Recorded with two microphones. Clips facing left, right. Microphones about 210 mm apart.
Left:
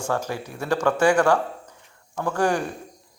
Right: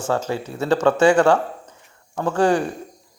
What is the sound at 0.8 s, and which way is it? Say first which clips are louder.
Speech: right 3 dB; 20° right (ahead or behind).